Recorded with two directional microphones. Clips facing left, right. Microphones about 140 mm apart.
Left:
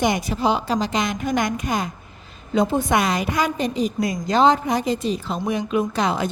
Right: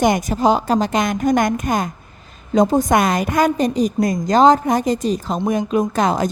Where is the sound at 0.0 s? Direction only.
45° right (ahead or behind).